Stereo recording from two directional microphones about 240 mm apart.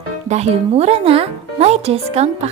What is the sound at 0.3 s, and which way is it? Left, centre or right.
A woman's voice, right.